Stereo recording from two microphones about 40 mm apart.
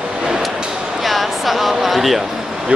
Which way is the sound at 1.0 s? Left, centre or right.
Centre.